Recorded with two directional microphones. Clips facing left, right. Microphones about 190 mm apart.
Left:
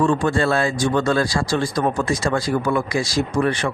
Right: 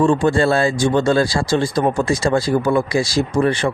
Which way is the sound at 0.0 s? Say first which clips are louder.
Right 4 dB; 30° right (ahead or behind).